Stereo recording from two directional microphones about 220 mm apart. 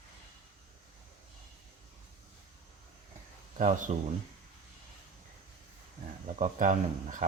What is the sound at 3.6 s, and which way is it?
Speech, 35° right (ahead or behind).